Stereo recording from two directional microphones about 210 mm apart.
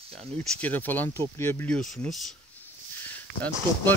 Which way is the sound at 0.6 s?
10° left (ahead or behind).